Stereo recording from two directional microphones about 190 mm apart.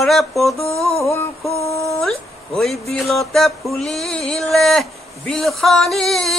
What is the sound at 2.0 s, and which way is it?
Speech, centre (ahead or behind).